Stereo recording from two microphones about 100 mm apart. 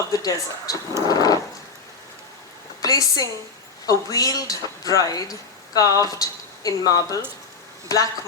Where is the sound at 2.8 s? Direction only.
40° left (ahead or behind).